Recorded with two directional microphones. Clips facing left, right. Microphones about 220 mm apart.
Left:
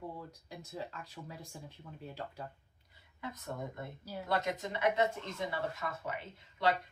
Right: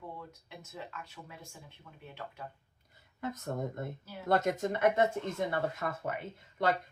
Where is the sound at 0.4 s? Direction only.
35° left (ahead or behind).